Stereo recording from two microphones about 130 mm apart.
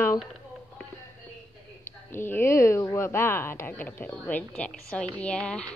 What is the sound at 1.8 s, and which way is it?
A woman's voice, 20° left (ahead or behind).